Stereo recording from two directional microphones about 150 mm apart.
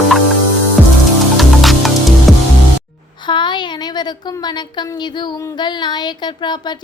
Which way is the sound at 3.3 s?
30° left (ahead or behind).